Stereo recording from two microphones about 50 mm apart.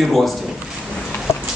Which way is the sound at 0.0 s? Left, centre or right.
Centre.